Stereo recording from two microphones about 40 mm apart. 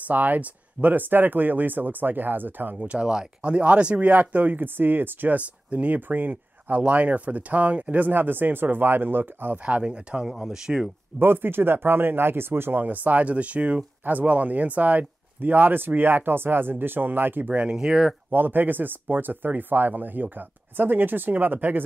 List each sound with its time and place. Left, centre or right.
0.1 s speech: right
2.8 s speech: right
5.7 s speech: right
5.9 s speech: right
8.0 s speech: right
9.7 s speech: right
10.2 s speech: centre
11.1 s speech: right
12.8 s speech: right
14.0 s speech: right
17.6 s speech: right
18.3 s speech: right